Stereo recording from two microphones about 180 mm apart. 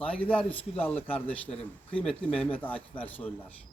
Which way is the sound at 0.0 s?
5° left (ahead or behind).